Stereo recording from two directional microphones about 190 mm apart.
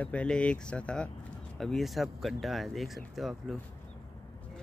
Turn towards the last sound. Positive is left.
turn(degrees=0)  # may be behind; listen again after turning